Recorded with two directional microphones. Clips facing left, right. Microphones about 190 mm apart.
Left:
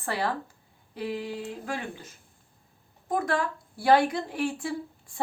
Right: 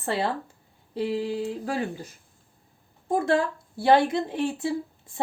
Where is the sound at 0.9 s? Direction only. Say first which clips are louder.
Right 6 dB; 30° right (ahead or behind).